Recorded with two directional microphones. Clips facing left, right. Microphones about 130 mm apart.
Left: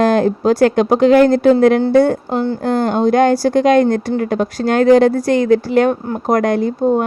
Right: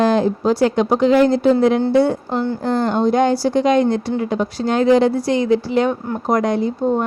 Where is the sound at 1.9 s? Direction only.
45° left (ahead or behind).